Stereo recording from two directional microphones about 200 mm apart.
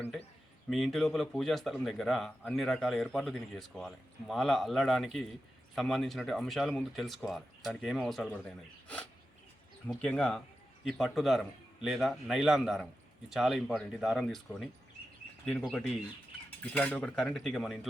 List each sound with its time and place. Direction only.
0.7 s a man's voice: centre (ahead or behind)
9.8 s a man's voice: 5° left (ahead or behind)
15.7 s a man's voice: 5° left (ahead or behind)